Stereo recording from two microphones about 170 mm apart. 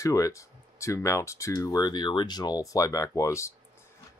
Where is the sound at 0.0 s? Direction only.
20° left (ahead or behind).